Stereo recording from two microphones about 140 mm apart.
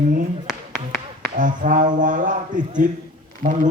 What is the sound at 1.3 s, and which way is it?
Speech, 65° right (ahead or behind).